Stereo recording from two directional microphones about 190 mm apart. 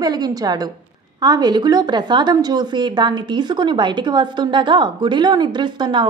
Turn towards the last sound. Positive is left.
turn(degrees=-25)  # may be behind; listen again after turning